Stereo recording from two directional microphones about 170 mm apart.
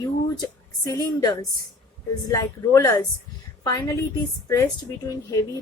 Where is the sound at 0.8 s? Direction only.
20° left (ahead or behind).